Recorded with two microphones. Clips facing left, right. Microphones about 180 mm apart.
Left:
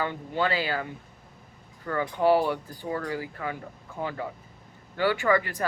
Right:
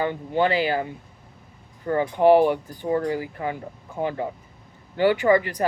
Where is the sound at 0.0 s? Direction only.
15° right (ahead or behind).